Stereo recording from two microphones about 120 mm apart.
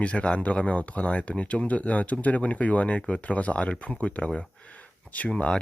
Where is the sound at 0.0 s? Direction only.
10° left (ahead or behind).